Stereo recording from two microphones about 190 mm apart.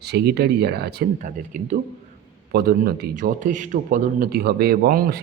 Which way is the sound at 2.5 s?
55° right (ahead or behind).